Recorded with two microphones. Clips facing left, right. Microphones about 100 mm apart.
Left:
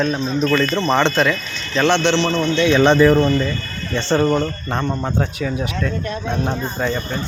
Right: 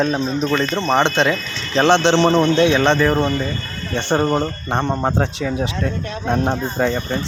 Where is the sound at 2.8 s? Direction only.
5° left (ahead or behind).